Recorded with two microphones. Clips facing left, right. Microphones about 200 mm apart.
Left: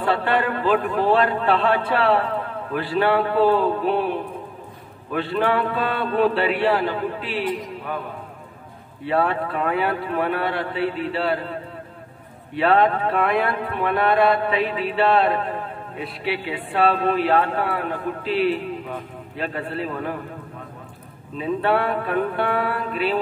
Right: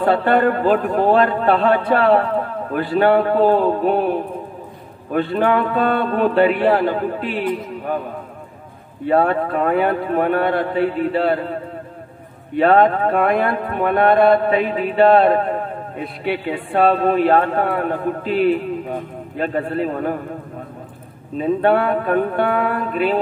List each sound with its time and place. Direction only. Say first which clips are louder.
0.0 s a man's voice: right 6 dB; 45° right (ahead or behind)
21.4 s speech: right 5 dB; 50° right (ahead or behind)